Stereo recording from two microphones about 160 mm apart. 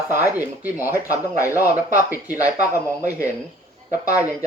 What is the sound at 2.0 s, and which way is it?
Speech, 10° right (ahead or behind).